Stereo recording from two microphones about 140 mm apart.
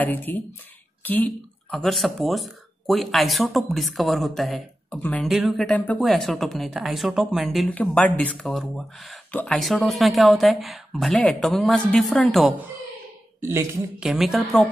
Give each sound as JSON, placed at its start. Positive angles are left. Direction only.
{"t": 0.0, "sound": "speech", "side_deg": 15}
{"t": 5.3, "sound": "speech", "side_deg": 0}
{"t": 5.7, "sound": "speech", "side_deg": 10}
{"t": 5.9, "sound": "speech", "side_deg": 0}
{"t": 9.3, "sound": "speech", "side_deg": 10}
{"t": 9.6, "sound": "speech", "side_deg": 0}
{"t": 13.4, "sound": "speech", "side_deg": -20}
{"t": 13.9, "sound": "speech", "side_deg": 0}